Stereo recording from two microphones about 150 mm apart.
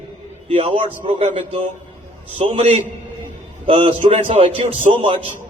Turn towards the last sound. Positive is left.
turn(degrees=-35)  # may be behind; listen again after turning